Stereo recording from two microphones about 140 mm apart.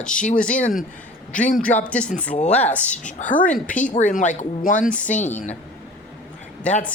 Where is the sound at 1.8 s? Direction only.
10° left (ahead or behind).